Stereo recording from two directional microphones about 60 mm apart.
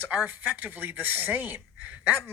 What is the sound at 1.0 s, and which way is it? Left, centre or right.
Speech, right.